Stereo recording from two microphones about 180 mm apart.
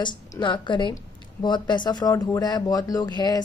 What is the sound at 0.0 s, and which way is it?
Speech, 25° left (ahead or behind).